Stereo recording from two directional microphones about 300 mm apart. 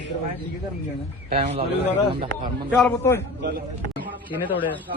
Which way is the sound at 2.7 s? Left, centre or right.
Centre.